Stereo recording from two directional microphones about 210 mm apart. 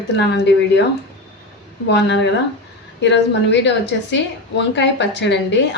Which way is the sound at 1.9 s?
55° left (ahead or behind).